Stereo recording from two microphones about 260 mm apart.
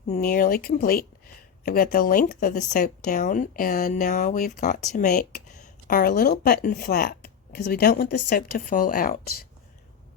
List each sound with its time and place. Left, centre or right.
0.1 s speech: left